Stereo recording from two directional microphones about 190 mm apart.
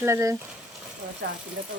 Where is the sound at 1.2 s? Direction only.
55° right (ahead or behind).